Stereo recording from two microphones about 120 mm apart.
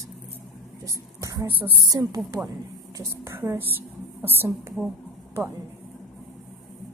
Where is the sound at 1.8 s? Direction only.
30° right (ahead or behind).